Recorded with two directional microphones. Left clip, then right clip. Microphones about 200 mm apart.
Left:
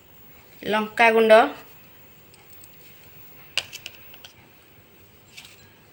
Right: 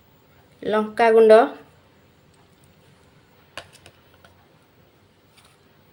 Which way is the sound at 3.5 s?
45° right (ahead or behind).